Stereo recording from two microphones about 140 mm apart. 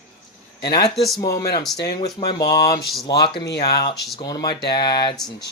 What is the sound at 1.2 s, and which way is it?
Speech, 25° left (ahead or behind).